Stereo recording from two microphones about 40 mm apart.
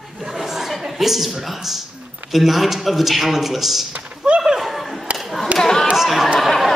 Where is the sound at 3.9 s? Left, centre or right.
Right.